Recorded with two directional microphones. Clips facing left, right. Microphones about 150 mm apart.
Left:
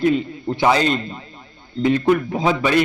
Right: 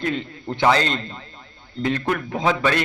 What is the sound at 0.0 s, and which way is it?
A man's voice, 10° left (ahead or behind).